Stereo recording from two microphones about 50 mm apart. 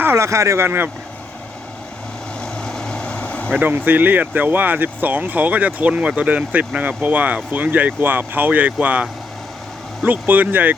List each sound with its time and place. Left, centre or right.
0.2 s speech: right
2.4 s vehicle: centre
3.5 s speech: right